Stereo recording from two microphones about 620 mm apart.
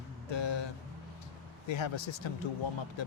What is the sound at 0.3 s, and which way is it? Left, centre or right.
Music, left.